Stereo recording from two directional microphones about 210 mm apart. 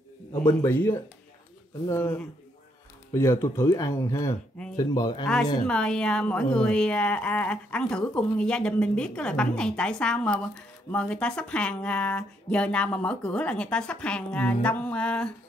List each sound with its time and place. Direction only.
0.3 s speech: 15° left (ahead or behind)
5.7 s a woman's voice: 5° left (ahead or behind)